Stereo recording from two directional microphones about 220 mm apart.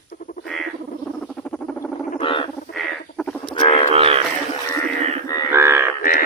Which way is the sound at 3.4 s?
20° left (ahead or behind).